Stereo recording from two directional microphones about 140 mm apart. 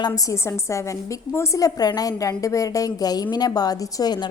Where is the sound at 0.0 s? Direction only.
25° left (ahead or behind).